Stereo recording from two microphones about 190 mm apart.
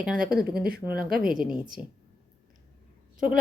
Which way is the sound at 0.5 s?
55° right (ahead or behind).